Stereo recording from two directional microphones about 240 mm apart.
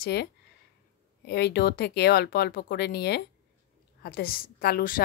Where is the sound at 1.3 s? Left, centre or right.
Left.